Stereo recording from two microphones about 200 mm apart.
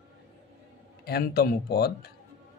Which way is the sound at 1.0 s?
50° left (ahead or behind).